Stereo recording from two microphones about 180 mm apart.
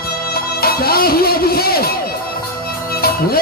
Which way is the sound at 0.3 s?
55° left (ahead or behind).